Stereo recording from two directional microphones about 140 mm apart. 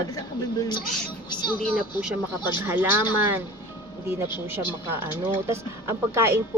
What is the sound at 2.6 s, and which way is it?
Speech, 15° right (ahead or behind).